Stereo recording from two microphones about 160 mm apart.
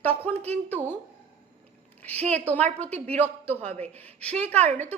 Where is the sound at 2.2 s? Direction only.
45° right (ahead or behind).